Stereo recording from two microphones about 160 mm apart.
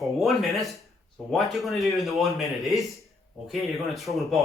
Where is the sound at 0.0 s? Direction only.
Centre (ahead or behind).